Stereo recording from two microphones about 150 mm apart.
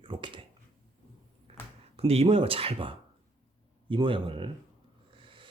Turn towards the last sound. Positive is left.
turn(degrees=-35)  # may be behind; listen again after turning